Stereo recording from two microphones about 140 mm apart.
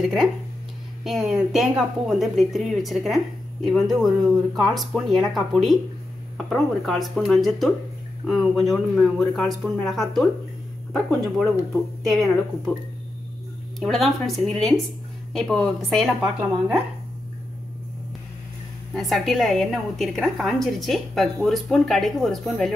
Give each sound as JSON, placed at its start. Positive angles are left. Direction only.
{"t": 0.0, "sound": "a woman's voice", "side_deg": 0}
{"t": 13.7, "sound": "a woman's voice", "side_deg": 0}
{"t": 18.9, "sound": "a woman's voice", "side_deg": 0}